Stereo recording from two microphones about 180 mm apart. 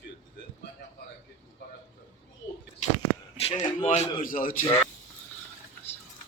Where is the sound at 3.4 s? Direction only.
35° left (ahead or behind).